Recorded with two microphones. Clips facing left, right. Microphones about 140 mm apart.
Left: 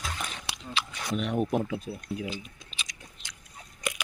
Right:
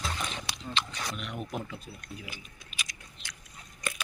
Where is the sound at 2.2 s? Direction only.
25° left (ahead or behind).